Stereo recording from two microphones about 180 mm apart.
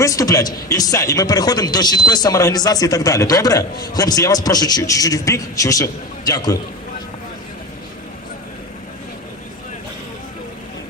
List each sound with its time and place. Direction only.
0.0 s a man's voice: 20° left (ahead or behind)